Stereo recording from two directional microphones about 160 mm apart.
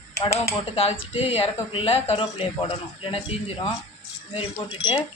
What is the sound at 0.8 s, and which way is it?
Speech, 35° left (ahead or behind).